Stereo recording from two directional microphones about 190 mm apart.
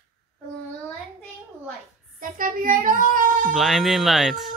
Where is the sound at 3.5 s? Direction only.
Centre (ahead or behind).